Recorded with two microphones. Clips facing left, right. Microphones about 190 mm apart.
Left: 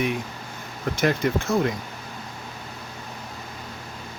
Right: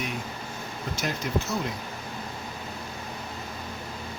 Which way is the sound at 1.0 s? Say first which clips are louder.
Left 7 dB; 55° left (ahead or behind).